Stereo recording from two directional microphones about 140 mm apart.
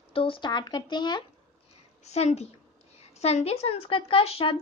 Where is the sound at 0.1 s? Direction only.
40° left (ahead or behind).